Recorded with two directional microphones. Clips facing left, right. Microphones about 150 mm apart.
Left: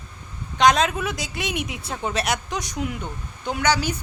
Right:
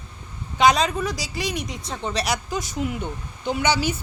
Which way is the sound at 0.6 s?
Centre (ahead or behind).